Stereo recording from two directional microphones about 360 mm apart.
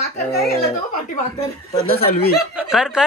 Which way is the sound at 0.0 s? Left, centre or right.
Centre.